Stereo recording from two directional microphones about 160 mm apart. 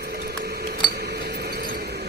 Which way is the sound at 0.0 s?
75° right (ahead or behind).